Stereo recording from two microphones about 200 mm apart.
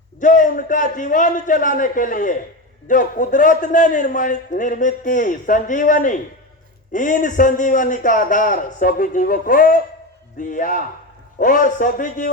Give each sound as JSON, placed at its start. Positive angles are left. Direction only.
{"t": 0.2, "sound": "a man's voice", "side_deg": 40}